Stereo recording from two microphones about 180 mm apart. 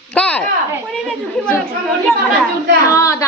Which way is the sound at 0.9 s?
Centre (ahead or behind).